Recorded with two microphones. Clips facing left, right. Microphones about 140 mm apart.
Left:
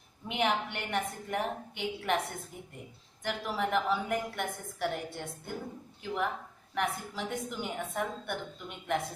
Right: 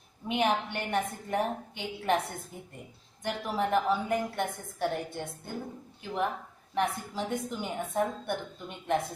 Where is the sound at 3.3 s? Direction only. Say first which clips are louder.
Right 3 dB; 35° right (ahead or behind).